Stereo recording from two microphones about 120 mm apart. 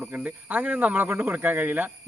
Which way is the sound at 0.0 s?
15° right (ahead or behind).